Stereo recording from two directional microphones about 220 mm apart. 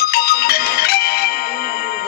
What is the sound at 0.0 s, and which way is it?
Music, 45° left (ahead or behind).